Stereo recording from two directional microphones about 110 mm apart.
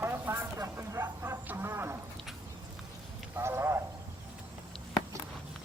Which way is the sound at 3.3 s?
20° right (ahead or behind).